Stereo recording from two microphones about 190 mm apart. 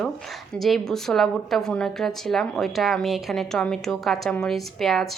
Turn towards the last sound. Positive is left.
turn(degrees=0)  # may be behind; listen again after turning